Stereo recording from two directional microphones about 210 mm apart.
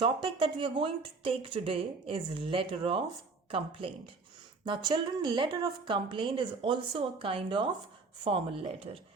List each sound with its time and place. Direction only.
0.0 s a woman's voice: 25° right (ahead or behind)